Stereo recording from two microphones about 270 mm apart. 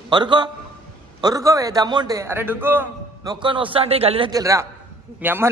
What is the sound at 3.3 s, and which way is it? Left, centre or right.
A man's voice, centre.